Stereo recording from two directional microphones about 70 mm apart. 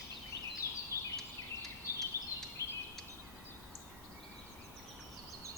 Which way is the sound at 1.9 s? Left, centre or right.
Left.